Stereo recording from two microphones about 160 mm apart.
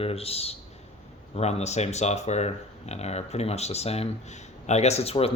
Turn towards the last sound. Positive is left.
turn(degrees=40)  # may be behind; listen again after turning